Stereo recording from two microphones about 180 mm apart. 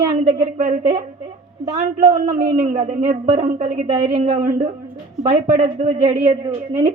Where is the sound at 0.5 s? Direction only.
50° right (ahead or behind).